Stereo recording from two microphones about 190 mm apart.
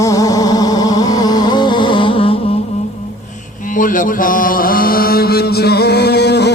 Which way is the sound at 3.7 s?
45° left (ahead or behind).